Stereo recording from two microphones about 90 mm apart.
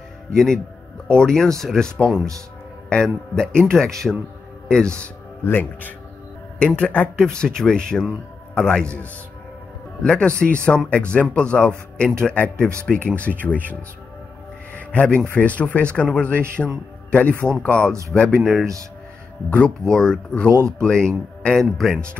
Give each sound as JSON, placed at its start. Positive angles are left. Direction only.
{"t": 0.3, "sound": "speech", "side_deg": 5}
{"t": 5.4, "sound": "speech", "side_deg": 20}
{"t": 14.7, "sound": "a sound", "side_deg": 15}
{"t": 15.2, "sound": "a man's voice", "side_deg": 15}
{"t": 19.5, "sound": "speech", "side_deg": 10}